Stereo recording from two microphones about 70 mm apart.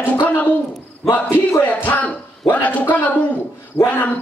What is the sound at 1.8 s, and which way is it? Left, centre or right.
Speech, left.